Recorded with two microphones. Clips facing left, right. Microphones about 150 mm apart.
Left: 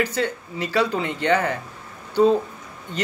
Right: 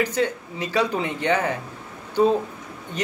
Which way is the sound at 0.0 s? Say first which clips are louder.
Right 1 dB; 20° right (ahead or behind).